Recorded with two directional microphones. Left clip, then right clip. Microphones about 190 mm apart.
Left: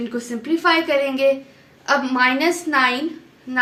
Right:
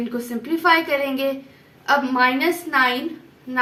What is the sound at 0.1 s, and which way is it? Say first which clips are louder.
A woman's voice: left 2 dB; 30° left (ahead or behind).